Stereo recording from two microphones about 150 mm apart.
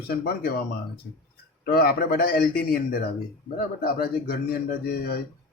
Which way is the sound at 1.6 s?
90° left.